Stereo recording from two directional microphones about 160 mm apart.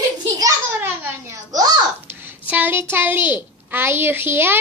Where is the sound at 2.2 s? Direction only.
10° right (ahead or behind).